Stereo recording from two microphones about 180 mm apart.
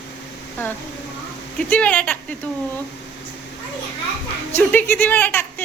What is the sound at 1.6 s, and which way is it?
Speech, 5° left (ahead or behind).